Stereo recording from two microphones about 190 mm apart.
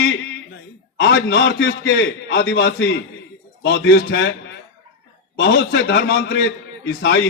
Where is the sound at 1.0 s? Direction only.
65° left (ahead or behind).